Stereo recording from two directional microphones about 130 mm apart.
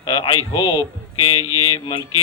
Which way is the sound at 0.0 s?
45° left (ahead or behind).